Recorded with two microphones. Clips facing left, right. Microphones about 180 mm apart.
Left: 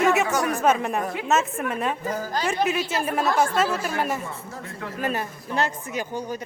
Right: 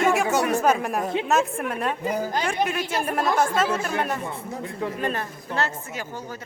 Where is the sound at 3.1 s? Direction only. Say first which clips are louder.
Even; 5° left (ahead or behind).